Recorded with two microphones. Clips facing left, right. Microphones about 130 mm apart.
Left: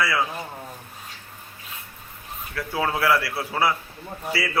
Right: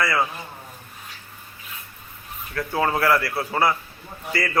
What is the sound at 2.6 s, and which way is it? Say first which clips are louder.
A man's voice: right 3 dB; 5° left (ahead or behind).